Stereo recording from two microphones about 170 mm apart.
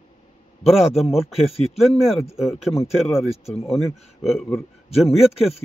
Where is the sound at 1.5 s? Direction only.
35° left (ahead or behind).